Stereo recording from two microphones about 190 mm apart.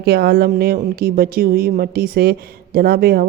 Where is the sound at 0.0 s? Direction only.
55° right (ahead or behind).